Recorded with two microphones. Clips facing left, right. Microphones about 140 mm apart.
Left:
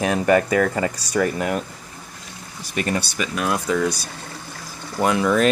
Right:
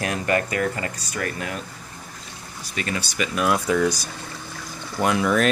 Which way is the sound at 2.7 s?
40° left (ahead or behind).